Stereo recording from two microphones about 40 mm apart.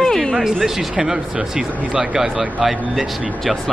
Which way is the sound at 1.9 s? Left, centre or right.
Right.